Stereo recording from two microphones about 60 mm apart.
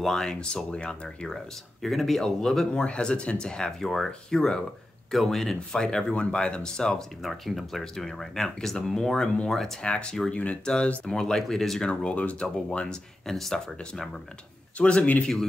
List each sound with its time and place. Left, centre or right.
0.0 s speech: centre
7.2 s speech: centre; by 10.7 s left
11.1 s speech: centre
11.9 s speech: centre
14.8 s speech: left